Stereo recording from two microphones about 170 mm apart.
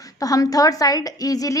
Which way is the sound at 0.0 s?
20° left (ahead or behind).